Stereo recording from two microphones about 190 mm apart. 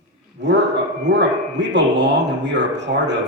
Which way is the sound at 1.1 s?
65° right (ahead or behind).